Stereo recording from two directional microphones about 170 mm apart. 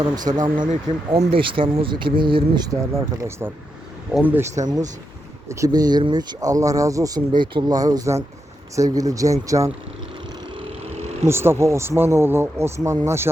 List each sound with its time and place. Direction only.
0.2 s speech: 25° right (ahead or behind)
0.7 s speech: 40° right (ahead or behind)
3.2 s speech: 15° right (ahead or behind)
4.5 s speech: 45° right (ahead or behind)
5.5 s speech: 20° right (ahead or behind)
11.3 s speech: 15° right (ahead or behind)